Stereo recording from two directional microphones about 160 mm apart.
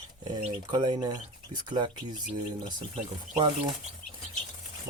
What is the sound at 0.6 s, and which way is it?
Speech, 25° right (ahead or behind).